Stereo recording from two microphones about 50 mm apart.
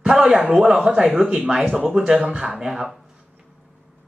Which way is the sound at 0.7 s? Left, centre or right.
Centre.